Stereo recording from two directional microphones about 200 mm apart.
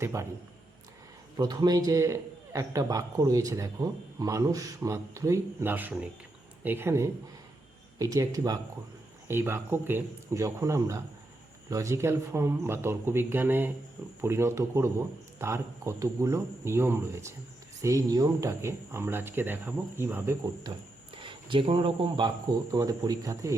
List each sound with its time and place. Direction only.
0.0 s a man's voice: 15° right (ahead or behind)
1.4 s a man's voice: 20° right (ahead or behind)